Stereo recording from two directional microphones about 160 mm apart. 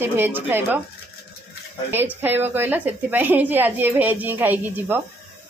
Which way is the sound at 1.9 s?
10° right (ahead or behind).